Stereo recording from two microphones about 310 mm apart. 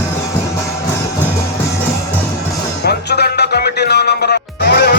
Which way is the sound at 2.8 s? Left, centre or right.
Left.